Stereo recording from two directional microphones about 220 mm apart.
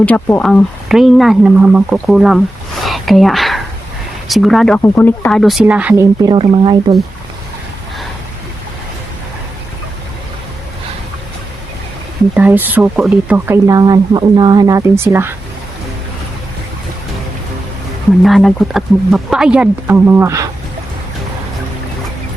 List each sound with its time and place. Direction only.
0.0 s speech: 5° left (ahead or behind)
6.2 s speech: 20° right (ahead or behind)
12.3 s speech: 10° right (ahead or behind)
18.2 s speech: centre (ahead or behind)